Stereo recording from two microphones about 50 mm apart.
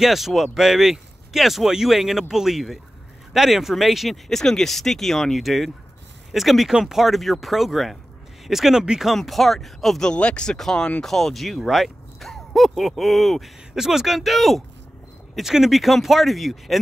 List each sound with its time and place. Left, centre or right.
0.0 s speech: centre
10.0 s speech: left; by 16.8 s centre